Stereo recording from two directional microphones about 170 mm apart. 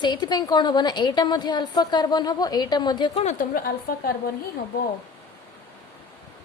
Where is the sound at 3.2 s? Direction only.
50° left (ahead or behind).